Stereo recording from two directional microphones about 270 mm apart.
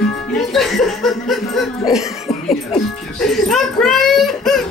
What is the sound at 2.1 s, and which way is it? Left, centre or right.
Chuckle, left.